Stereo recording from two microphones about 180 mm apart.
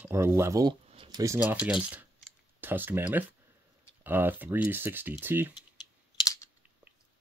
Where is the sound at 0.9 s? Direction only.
25° right (ahead or behind).